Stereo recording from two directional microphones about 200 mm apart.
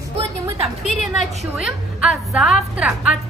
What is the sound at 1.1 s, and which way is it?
A woman's voice, 5° right (ahead or behind).